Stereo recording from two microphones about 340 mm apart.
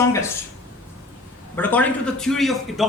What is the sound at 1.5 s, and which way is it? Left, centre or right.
Speech, centre.